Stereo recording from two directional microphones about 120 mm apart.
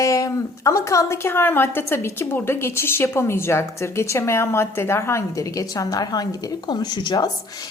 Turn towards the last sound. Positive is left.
turn(degrees=35)  # may be behind; listen again after turning